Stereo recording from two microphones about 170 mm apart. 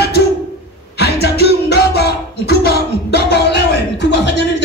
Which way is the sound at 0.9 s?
75° left (ahead or behind).